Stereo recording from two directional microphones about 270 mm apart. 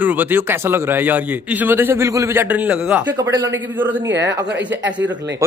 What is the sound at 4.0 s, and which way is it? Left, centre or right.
Speech, right.